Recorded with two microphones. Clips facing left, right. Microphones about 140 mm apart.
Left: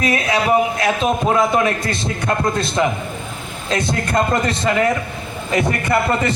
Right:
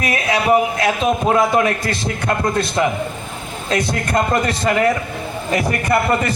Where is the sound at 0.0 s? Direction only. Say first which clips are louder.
Left 1 dB; 25° left (ahead or behind).